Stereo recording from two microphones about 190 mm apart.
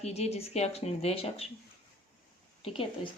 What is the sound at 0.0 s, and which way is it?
Speech, 35° left (ahead or behind).